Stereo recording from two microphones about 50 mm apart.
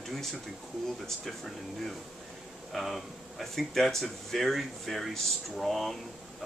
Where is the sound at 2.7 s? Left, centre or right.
Centre.